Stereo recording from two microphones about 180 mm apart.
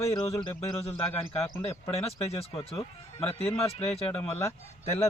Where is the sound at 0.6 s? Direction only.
35° left (ahead or behind).